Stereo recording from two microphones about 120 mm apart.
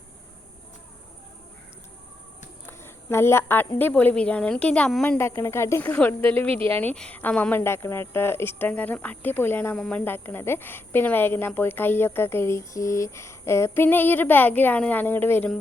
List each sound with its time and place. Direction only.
2.6 s a woman's voice: 20° left (ahead or behind)
5.0 s speech: 20° left (ahead or behind)
9.7 s speech: 5° left (ahead or behind)
10.0 s speech: 15° left (ahead or behind)